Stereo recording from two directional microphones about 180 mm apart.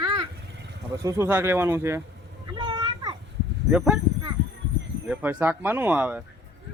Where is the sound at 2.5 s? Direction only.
25° right (ahead or behind).